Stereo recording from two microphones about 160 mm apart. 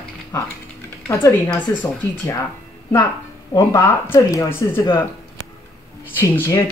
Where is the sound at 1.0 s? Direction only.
15° left (ahead or behind).